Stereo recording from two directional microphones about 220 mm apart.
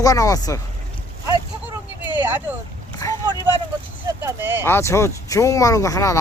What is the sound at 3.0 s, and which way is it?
Vehicle, 15° left (ahead or behind).